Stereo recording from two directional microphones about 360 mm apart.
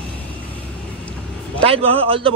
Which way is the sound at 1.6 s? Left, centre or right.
Centre.